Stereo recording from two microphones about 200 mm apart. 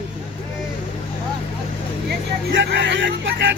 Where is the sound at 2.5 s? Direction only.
65° right (ahead or behind).